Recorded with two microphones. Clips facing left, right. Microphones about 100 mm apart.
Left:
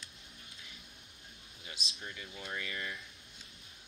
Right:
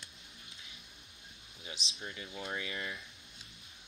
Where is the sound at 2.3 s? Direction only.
25° right (ahead or behind).